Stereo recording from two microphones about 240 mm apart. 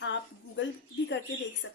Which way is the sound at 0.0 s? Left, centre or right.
Left.